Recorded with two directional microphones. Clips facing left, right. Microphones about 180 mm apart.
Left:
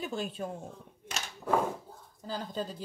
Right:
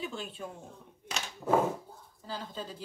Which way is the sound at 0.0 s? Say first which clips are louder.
Left 4 dB; 45° left (ahead or behind).